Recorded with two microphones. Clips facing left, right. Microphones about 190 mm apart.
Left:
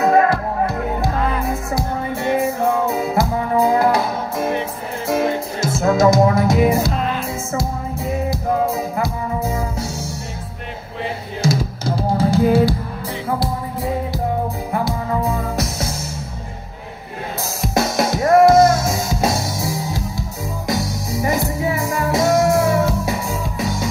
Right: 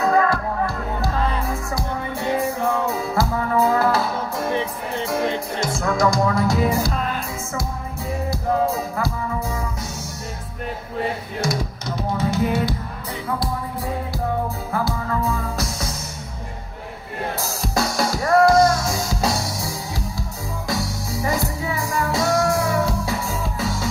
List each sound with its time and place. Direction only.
0.0 s music: 20° left (ahead or behind)
8.9 s music: 20° left (ahead or behind)
11.4 s drum: 25° left (ahead or behind)
14.7 s music: 15° left (ahead or behind)
17.6 s music: 20° left (ahead or behind)
21.2 s music: 20° left (ahead or behind)
23.1 s music: centre (ahead or behind)